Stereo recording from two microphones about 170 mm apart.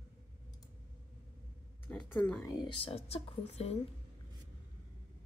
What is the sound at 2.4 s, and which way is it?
Speech, 25° left (ahead or behind).